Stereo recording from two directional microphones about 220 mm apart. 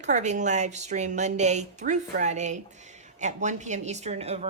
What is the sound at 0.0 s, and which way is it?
A woman's voice, 30° right (ahead or behind).